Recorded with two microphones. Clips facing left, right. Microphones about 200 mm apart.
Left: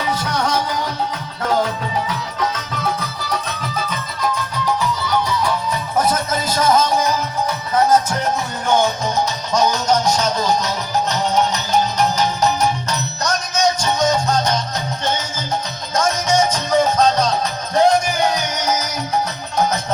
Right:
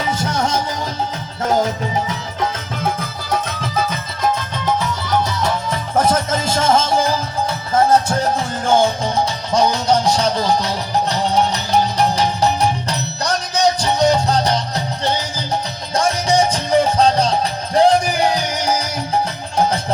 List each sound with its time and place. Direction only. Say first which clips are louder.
0.0 s music: right 1 dB; 25° right (ahead or behind)
6.5 s music: even; 25° right (ahead or behind)
16.0 s music: right 1 dB; 30° right (ahead or behind)